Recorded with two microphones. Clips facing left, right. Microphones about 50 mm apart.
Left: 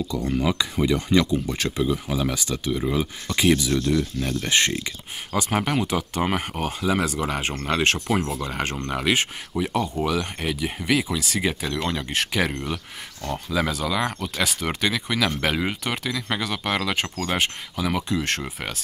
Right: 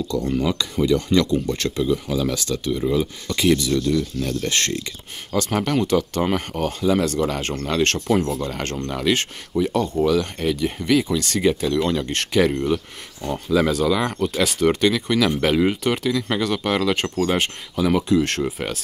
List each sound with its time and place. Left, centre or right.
0.1 s speech: centre